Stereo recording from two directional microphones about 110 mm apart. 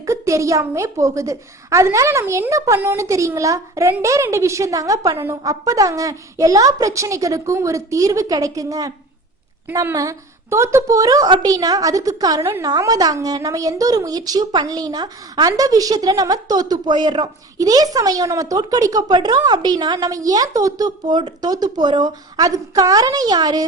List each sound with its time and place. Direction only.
0.0 s a woman's voice: 30° right (ahead or behind)